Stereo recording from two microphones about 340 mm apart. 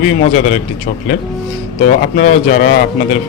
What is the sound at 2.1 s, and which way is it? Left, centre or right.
Speech, left.